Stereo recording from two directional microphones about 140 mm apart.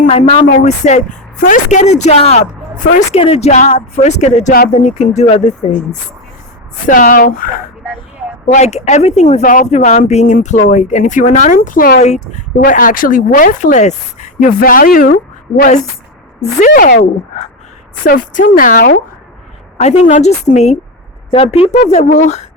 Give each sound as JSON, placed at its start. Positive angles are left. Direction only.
{"t": 0.1, "sound": "a woman's voice", "side_deg": 50}
{"t": 3.2, "sound": "a woman's voice", "side_deg": 45}
{"t": 6.8, "sound": "speech", "side_deg": 70}
{"t": 8.4, "sound": "speech", "side_deg": 50}
{"t": 9.4, "sound": "a woman's voice", "side_deg": 70}
{"t": 11.9, "sound": "speech", "side_deg": 55}
{"t": 16.4, "sound": "a woman's voice", "side_deg": 60}
{"t": 18.0, "sound": "speech", "side_deg": 80}
{"t": 19.8, "sound": "speech", "side_deg": 50}
{"t": 21.2, "sound": "speech", "side_deg": 40}